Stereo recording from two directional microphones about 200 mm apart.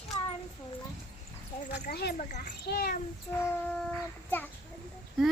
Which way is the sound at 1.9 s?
50° left (ahead or behind).